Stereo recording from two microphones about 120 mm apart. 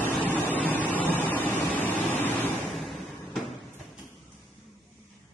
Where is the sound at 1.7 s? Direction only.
15° left (ahead or behind).